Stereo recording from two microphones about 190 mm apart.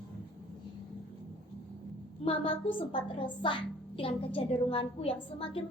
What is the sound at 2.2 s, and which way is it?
A child's voice, 30° left (ahead or behind).